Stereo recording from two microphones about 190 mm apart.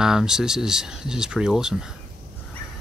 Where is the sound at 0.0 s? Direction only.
5° right (ahead or behind).